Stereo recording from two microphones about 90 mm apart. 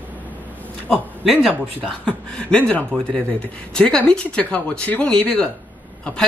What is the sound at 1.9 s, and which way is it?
Speech, 10° left (ahead or behind).